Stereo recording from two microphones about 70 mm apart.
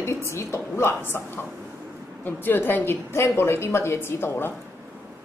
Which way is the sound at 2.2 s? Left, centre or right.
Left.